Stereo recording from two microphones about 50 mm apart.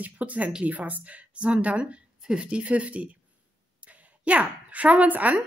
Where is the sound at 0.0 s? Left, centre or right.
Right.